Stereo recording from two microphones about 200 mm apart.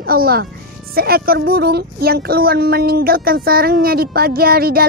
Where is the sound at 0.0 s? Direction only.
50° right (ahead or behind).